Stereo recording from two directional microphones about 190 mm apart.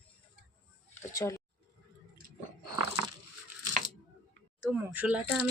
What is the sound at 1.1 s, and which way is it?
Speech, 15° left (ahead or behind).